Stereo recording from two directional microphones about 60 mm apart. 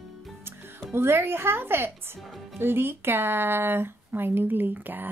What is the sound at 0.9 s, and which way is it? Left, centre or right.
A woman's voice, right.